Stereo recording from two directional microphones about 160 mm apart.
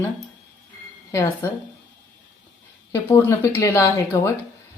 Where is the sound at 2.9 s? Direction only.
20° left (ahead or behind).